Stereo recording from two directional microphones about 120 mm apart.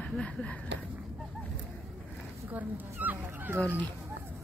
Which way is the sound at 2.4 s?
15° right (ahead or behind).